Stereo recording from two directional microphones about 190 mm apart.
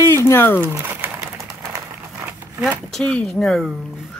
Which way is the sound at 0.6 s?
10° right (ahead or behind).